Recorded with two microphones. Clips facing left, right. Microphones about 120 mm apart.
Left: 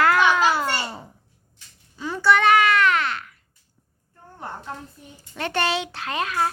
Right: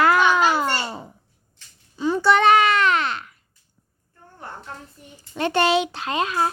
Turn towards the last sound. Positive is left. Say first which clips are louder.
# right 2 dB
turn(degrees=-20)  # may be behind; listen again after turning